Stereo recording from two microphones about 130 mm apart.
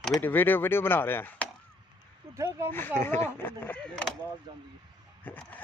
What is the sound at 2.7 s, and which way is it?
Speech, 15° left (ahead or behind).